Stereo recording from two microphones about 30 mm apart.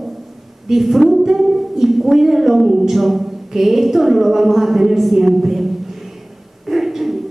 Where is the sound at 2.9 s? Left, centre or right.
Centre.